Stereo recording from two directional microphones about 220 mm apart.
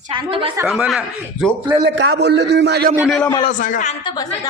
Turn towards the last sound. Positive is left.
turn(degrees=20)  # may be behind; listen again after turning